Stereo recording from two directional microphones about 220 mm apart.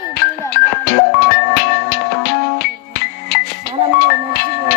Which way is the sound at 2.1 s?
45° left (ahead or behind).